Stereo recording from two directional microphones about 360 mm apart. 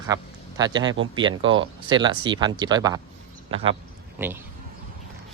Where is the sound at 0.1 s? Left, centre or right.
Centre.